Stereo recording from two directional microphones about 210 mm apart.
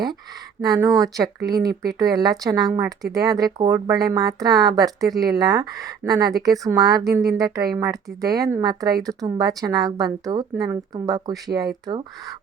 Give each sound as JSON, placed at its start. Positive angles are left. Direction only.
{"t": 0.6, "sound": "speech", "side_deg": -15}